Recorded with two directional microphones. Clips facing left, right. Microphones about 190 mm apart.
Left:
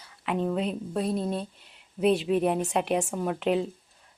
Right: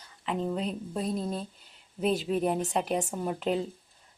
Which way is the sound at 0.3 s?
Centre (ahead or behind).